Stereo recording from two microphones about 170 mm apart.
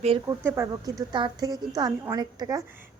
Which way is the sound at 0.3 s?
15° right (ahead or behind).